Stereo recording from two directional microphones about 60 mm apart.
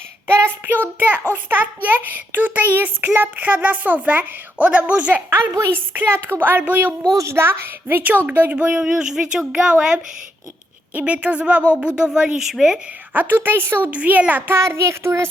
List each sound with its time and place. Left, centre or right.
0.3 s child singing: right
1.3 s a child's voice: right
5.3 s a child's voice: right
7.2 s a child's voice: right; by 12.8 s centre
13.1 s a child's voice: right
13.9 s a woman's voice: right
14.5 s speech: right